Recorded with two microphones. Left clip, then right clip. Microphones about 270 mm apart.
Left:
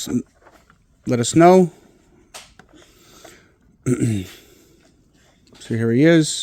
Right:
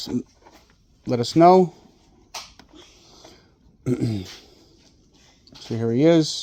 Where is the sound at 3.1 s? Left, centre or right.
Left.